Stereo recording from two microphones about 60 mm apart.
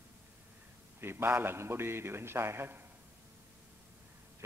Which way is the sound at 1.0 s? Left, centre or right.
Right.